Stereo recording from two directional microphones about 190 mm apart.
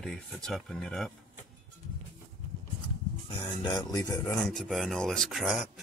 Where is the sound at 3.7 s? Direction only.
20° left (ahead or behind).